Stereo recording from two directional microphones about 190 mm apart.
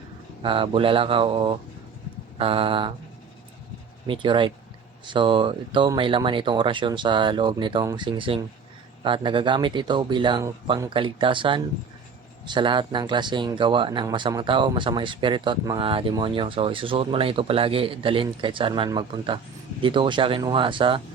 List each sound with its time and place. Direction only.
0.4 s speech: 25° right (ahead or behind)
4.0 s speech: 25° right (ahead or behind)